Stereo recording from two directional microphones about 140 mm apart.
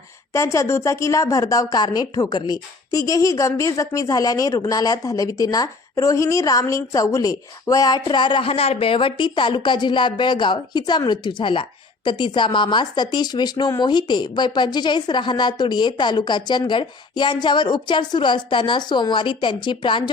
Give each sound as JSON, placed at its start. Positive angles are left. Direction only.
{"t": 0.3, "sound": "a woman's voice", "side_deg": 20}